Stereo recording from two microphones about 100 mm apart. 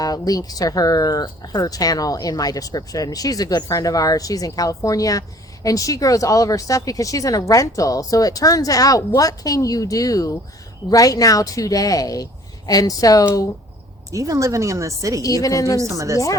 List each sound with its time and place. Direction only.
0.0 s speech: 40° left (ahead or behind)
14.1 s speech: 35° right (ahead or behind)
15.2 s speech: 35° left (ahead or behind)
15.8 s speech: 30° right (ahead or behind)